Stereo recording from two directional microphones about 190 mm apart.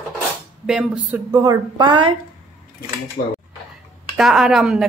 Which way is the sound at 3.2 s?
50° left (ahead or behind).